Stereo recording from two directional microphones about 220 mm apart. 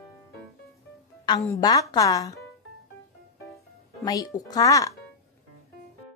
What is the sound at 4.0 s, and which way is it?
Speech, 15° left (ahead or behind).